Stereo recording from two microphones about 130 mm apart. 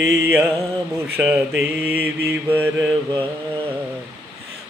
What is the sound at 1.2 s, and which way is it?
Mantra, 5° right (ahead or behind).